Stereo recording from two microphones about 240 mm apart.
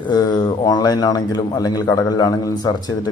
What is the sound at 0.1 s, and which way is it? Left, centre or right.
A man's voice, centre.